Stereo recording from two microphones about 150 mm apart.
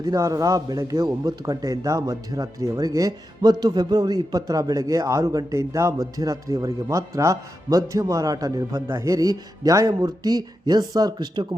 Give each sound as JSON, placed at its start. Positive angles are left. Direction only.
{"t": 0.0, "sound": "a man's voice", "side_deg": -25}